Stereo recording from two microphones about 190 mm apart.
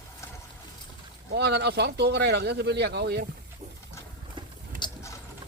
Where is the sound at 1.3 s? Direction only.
60° right (ahead or behind).